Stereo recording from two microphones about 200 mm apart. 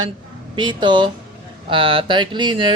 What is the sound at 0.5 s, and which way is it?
Speech, 20° right (ahead or behind).